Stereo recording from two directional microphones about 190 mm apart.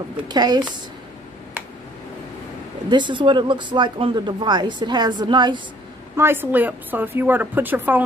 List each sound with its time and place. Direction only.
0.3 s speech: 20° right (ahead or behind)
2.9 s speech: 25° right (ahead or behind)
6.1 s a woman's voice: 10° right (ahead or behind)